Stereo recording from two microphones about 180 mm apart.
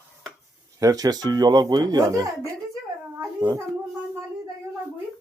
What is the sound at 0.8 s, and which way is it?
Speech, 20° right (ahead or behind).